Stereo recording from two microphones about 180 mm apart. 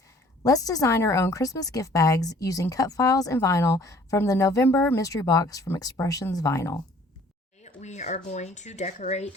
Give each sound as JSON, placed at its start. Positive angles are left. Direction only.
{"t": 0.4, "sound": "speech", "side_deg": 20}
{"t": 7.6, "sound": "speech", "side_deg": 40}